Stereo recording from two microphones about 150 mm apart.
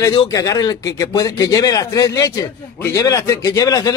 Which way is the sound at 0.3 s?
25° left (ahead or behind).